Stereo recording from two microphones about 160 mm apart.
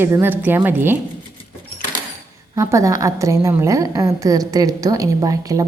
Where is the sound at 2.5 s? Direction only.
20° right (ahead or behind).